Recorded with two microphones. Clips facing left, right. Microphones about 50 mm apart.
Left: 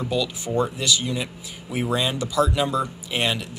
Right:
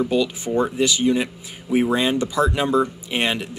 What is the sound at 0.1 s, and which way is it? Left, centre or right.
Speech, right.